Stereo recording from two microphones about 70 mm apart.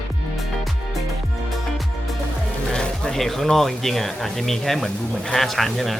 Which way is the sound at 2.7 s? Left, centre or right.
Centre.